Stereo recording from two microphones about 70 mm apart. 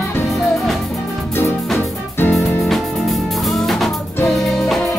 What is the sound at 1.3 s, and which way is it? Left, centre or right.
Music, left.